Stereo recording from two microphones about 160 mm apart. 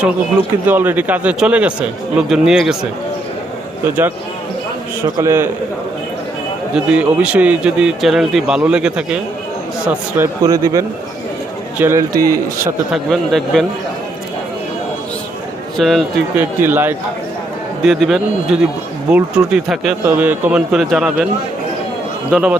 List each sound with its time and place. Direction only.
0.7 s speech: 10° right (ahead or behind)
3.8 s a man's voice: 10° right (ahead or behind)
6.7 s speech: 5° right (ahead or behind)
10.4 s a man's voice: 20° right (ahead or behind)
12.9 s speech: centre (ahead or behind)
15.8 s speech: centre (ahead or behind)
16.4 s speech: 15° right (ahead or behind)
17.8 s speech: centre (ahead or behind)